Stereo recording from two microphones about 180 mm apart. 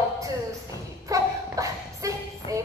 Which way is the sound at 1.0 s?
20° right (ahead or behind).